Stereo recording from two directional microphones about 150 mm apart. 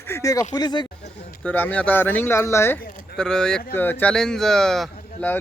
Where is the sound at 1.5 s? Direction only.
10° left (ahead or behind).